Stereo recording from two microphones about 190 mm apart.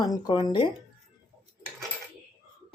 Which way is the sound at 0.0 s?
20° left (ahead or behind).